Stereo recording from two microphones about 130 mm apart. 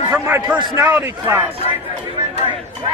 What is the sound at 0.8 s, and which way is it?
Speech, 15° right (ahead or behind).